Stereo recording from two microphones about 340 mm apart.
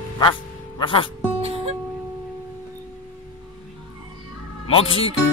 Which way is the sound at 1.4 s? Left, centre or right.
Centre.